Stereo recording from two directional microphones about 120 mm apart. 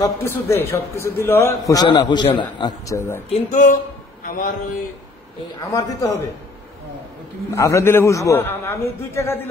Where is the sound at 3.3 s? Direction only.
90° left.